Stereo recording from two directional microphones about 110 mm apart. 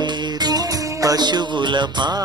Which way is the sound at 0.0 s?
40° right (ahead or behind).